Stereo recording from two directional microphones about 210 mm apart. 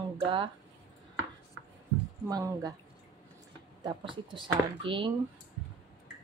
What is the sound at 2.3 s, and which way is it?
Speech, 15° right (ahead or behind).